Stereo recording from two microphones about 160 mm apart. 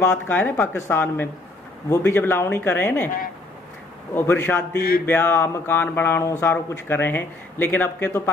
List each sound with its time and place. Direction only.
0.0 s speech: 10° left (ahead or behind)
4.1 s speech: 15° left (ahead or behind)
4.7 s a sound: 65° left (ahead or behind)
5.0 s speech: 15° left (ahead or behind)